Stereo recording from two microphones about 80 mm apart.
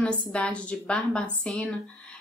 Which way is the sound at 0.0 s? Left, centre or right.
Centre.